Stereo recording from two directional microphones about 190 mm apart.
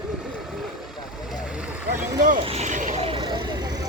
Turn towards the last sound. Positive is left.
turn(degrees=-20)  # may be behind; listen again after turning